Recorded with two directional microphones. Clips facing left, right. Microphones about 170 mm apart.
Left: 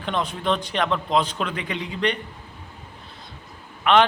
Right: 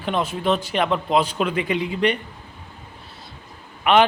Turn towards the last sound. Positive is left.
turn(degrees=-10)  # may be behind; listen again after turning